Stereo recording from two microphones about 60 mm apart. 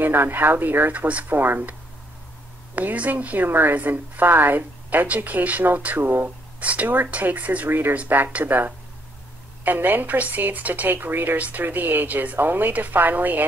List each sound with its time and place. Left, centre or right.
0.0 s speech: right
1.3 s speech: right
6.6 s speech: right